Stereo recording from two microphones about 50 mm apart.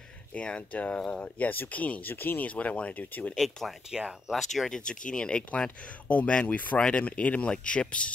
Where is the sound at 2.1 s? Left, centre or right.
Left.